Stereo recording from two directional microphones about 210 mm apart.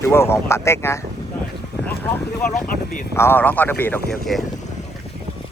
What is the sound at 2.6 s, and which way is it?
Speech, 40° left (ahead or behind).